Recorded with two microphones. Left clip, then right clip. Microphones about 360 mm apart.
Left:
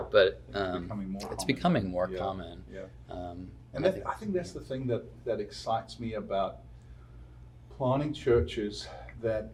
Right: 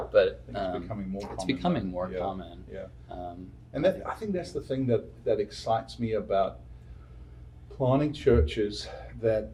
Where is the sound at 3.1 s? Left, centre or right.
Left.